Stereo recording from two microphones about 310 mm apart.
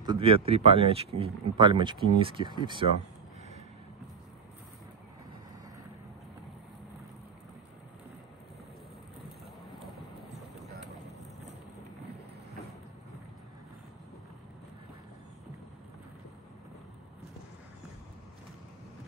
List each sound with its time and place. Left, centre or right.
0.0 s speech: centre